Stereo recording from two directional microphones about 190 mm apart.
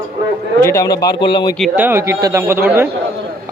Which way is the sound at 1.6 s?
10° right (ahead or behind).